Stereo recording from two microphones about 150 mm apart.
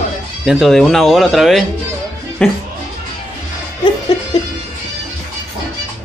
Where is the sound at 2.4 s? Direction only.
10° left (ahead or behind).